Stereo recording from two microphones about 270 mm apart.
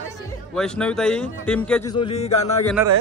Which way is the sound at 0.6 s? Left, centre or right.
Centre.